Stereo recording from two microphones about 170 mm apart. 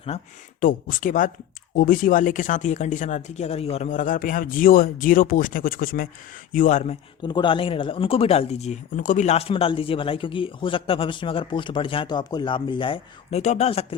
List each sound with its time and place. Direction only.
0.6 s speech: 50° left (ahead or behind)
7.2 s speech: 25° left (ahead or behind)